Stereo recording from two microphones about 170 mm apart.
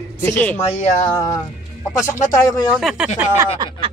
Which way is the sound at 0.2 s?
10° left (ahead or behind).